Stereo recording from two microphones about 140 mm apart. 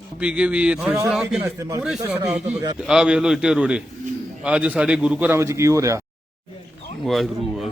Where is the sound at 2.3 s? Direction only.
55° right (ahead or behind).